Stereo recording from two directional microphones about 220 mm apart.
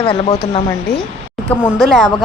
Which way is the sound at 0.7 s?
5° left (ahead or behind).